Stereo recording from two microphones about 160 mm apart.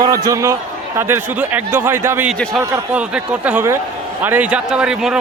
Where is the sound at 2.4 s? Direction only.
5° left (ahead or behind).